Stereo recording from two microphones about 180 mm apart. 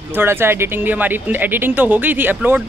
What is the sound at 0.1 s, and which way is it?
Speech, 10° right (ahead or behind).